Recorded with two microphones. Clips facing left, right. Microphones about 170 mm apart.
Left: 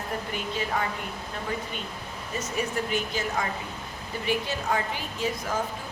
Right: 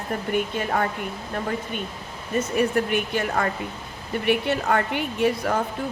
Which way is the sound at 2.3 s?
60° right (ahead or behind).